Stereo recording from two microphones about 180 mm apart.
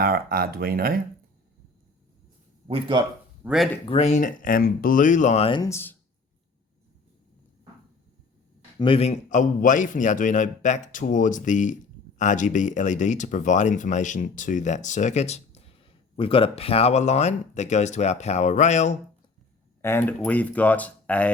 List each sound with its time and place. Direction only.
0.0 s speech: 55° right (ahead or behind)
2.6 s speech: 30° right (ahead or behind)
3.4 s speech: centre (ahead or behind)
3.8 s a man's voice: 35° left (ahead or behind)
5.6 s speech: 15° left (ahead or behind)
8.8 s a man's voice: 30° left (ahead or behind)
19.8 s speech: 15° left (ahead or behind)